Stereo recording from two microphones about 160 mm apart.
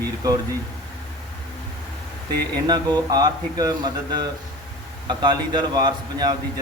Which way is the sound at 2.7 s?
25° right (ahead or behind).